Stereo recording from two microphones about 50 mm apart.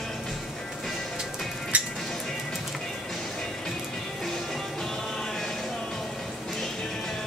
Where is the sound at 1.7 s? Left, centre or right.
Right.